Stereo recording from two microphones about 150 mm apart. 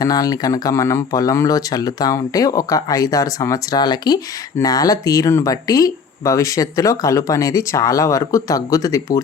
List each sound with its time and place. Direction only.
0.0 s speech: 25° left (ahead or behind)